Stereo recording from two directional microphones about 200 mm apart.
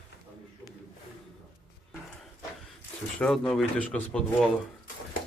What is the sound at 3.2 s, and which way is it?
Speech, 5° left (ahead or behind).